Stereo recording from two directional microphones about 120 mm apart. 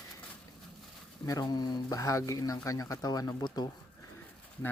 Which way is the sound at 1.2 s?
30° left (ahead or behind).